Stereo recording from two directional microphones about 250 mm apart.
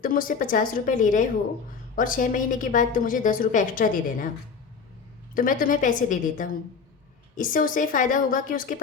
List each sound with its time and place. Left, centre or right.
0.0 s a woman's voice: left
5.3 s a woman's voice: left